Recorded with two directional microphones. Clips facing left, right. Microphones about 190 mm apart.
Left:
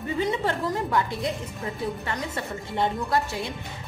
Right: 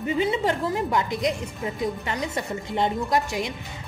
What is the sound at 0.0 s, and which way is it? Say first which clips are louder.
A woman's voice: right 3 dB; 15° right (ahead or behind).